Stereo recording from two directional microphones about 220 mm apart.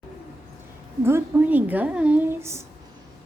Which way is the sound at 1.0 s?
10° right (ahead or behind).